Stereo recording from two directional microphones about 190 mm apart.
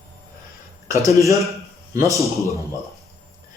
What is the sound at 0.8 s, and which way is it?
Speech, 15° right (ahead or behind).